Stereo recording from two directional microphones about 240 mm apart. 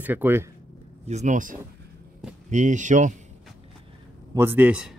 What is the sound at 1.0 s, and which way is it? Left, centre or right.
Speech, right.